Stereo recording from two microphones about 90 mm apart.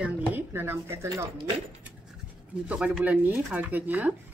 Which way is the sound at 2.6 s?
15° right (ahead or behind).